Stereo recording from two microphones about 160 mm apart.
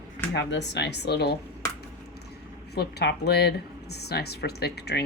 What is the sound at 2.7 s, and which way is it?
Speech, 90° left.